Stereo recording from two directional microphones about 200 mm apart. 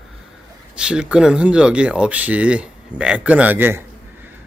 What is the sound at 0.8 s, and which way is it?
Speech, 5° right (ahead or behind).